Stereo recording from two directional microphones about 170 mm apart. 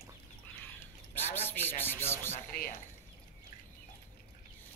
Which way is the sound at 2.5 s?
60° left (ahead or behind).